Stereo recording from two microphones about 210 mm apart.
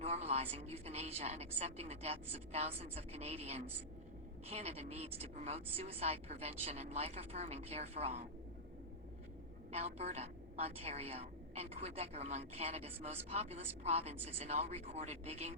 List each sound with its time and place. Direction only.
0.0 s a sound: 30° right (ahead or behind)
0.5 s a woman's voice: 30° right (ahead or behind)
9.7 s a woman's voice: 30° right (ahead or behind)